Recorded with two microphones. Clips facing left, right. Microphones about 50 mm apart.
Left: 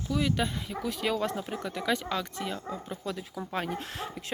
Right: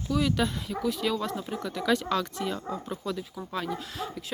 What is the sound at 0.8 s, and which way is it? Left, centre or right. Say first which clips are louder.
Speech: right 1 dB; left.